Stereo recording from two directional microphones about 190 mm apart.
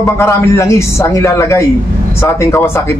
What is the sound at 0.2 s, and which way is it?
A man's voice, 15° left (ahead or behind).